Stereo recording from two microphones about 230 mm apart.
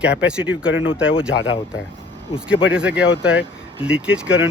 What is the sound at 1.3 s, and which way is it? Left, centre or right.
Speech, left.